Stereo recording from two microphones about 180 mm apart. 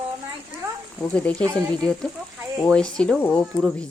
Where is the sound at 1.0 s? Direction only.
10° left (ahead or behind).